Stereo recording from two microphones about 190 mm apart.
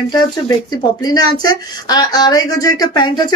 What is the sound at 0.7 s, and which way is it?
Speech, 20° left (ahead or behind).